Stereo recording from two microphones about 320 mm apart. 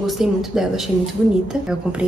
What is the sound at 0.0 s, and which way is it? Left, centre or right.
A woman's voice, centre.